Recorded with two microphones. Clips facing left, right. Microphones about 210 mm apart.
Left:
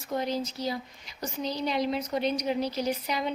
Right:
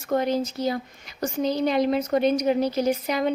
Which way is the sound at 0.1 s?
55° right (ahead or behind).